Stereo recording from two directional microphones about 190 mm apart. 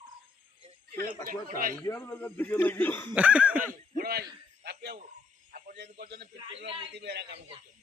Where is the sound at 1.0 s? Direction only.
50° right (ahead or behind).